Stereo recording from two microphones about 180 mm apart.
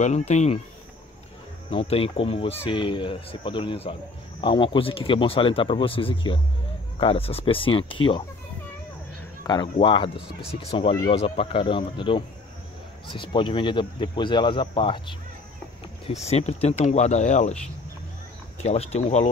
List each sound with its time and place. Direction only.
0.0 s speech: 40° left (ahead or behind)
1.7 s speech: 30° left (ahead or behind)
9.4 s speech: 25° left (ahead or behind); by 17.6 s 40° left (ahead or behind)
18.6 s speech: 35° left (ahead or behind)